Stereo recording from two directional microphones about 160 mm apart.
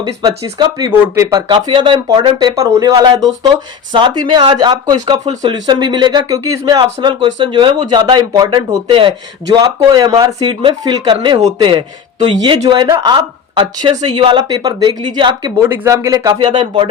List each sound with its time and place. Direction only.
0.0 s speech: 25° right (ahead or behind)
15.5 s speech: 15° right (ahead or behind)